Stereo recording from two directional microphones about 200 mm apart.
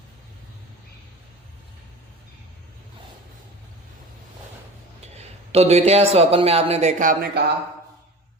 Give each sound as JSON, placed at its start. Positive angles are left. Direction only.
{"t": 5.1, "sound": "speech", "side_deg": -30}